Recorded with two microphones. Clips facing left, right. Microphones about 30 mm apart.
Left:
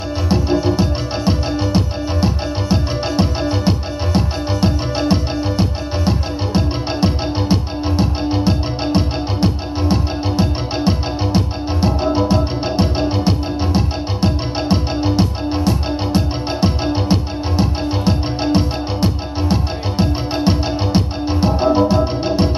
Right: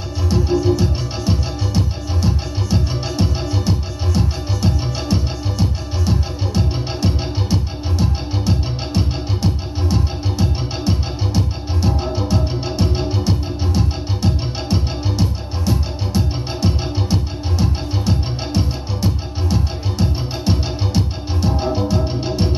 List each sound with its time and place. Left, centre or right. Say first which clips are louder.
0.3 s music: even; left